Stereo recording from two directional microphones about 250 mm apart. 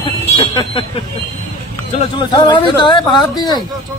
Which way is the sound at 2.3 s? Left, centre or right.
Centre.